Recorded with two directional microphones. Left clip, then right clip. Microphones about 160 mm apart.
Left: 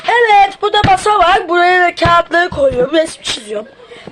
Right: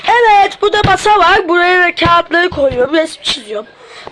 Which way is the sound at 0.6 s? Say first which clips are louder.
Right 1 dB; 45° right (ahead or behind).